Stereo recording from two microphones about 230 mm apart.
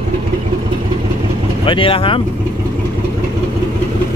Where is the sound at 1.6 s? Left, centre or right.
Left.